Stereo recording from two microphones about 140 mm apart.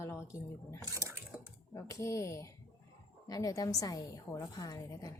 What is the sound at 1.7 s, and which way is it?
Speech, 20° left (ahead or behind).